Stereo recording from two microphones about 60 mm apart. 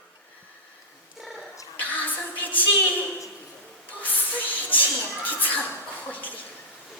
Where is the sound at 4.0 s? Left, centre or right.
Left.